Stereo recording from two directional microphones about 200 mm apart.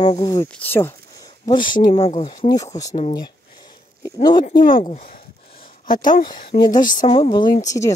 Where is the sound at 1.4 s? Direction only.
25° left (ahead or behind).